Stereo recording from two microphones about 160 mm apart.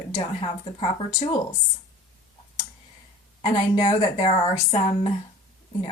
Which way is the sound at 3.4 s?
30° left (ahead or behind).